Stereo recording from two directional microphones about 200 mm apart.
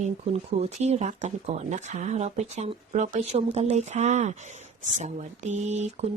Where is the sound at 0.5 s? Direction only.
35° right (ahead or behind).